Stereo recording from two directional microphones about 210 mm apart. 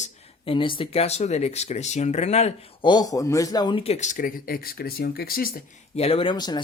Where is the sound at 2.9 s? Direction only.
15° left (ahead or behind); by 5.6 s 45° left (ahead or behind).